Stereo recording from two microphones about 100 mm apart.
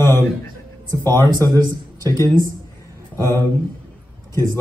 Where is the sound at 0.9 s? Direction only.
40° right (ahead or behind).